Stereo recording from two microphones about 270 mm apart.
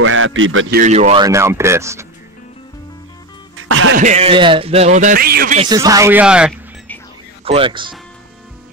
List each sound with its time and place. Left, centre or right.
0.0 s a man's voice: right
0.7 s speech: right; by 2.0 s centre
3.5 s music: right
3.9 s speech: right
5.6 s speech: centre
7.4 s speech: centre